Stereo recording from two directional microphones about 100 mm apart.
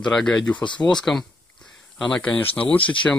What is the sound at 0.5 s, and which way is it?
Speech, 50° left (ahead or behind).